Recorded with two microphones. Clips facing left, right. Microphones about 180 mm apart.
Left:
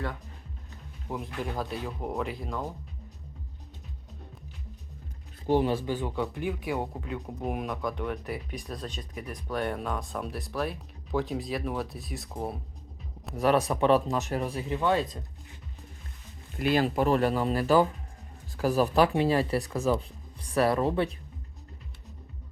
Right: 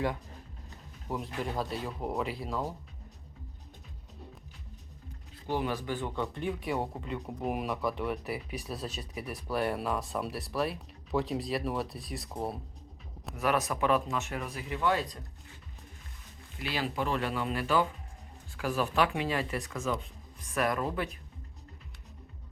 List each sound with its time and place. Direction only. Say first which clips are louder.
1.0 s speech: left 1 dB; centre (ahead or behind)
5.5 s speech: left 7 dB; 30° left (ahead or behind); by 12.5 s centre (ahead or behind)
13.3 s speech: left 5 dB; 35° left (ahead or behind)
16.6 s speech: left 8 dB; 50° left (ahead or behind); by 21.2 s 30° left (ahead or behind)